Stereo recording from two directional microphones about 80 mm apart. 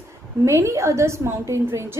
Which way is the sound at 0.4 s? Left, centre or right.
Right.